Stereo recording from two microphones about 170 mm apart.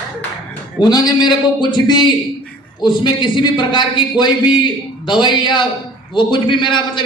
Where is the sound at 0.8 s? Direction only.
25° left (ahead or behind).